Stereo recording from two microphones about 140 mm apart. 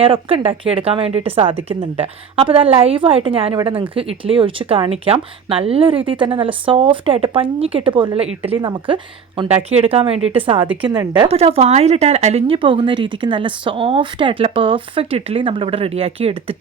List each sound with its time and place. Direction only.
0.0 s a woman's voice: 40° right (ahead or behind)
9.5 s speech: 45° right (ahead or behind)
10.8 s a woman's voice: 30° right (ahead or behind)
11.3 s speech: 45° right (ahead or behind)